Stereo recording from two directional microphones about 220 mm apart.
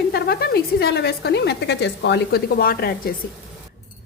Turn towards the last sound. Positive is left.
turn(degrees=45)  # may be behind; listen again after turning